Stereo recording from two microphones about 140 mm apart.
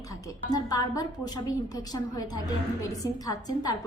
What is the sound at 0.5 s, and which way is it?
A woman's voice, 25° left (ahead or behind).